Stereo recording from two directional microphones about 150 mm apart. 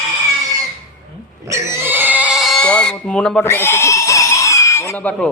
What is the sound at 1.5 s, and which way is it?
Neigh, 20° right (ahead or behind).